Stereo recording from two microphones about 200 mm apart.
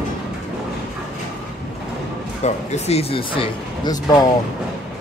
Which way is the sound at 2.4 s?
30° left (ahead or behind).